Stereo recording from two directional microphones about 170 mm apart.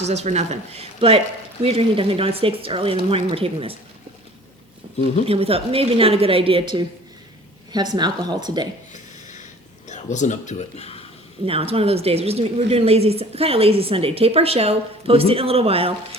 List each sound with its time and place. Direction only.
0.0 s a woman's voice: 40° right (ahead or behind)
5.2 s a woman's voice: 35° right (ahead or behind)
8.9 s a sound: 45° left (ahead or behind)
9.9 s speech: 45° left (ahead or behind)
11.4 s a woman's voice: 35° right (ahead or behind)